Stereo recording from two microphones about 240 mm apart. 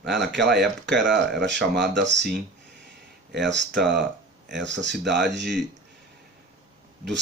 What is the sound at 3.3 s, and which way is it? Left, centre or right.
Speech, right.